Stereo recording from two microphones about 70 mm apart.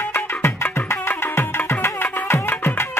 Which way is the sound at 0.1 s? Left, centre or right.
Left.